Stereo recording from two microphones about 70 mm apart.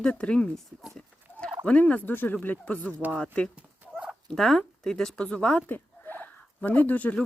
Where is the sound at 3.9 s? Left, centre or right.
Centre.